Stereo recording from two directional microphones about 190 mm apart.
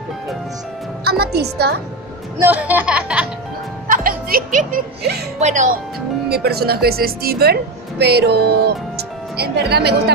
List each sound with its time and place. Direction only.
1.0 s a woman's voice: 55° right (ahead or behind)
2.4 s speech: 10° right (ahead or behind)
3.8 s speech: 45° right (ahead or behind)
5.4 s speech: 40° right (ahead or behind)
6.2 s speech: 55° right (ahead or behind)